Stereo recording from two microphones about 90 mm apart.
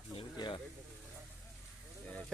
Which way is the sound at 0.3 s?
60° left (ahead or behind).